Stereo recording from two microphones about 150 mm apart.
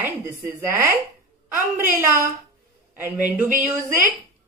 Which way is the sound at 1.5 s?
65° right (ahead or behind).